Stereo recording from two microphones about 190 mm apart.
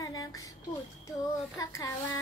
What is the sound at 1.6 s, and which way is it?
Child singing, 15° left (ahead or behind).